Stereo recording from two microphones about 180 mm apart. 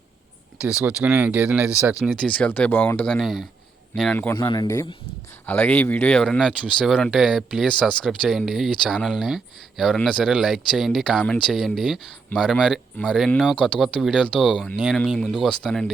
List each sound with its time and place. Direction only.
0.6 s a man's voice: 5° right (ahead or behind)
4.4 s speech: 25° left (ahead or behind); by 15.9 s 5° left (ahead or behind)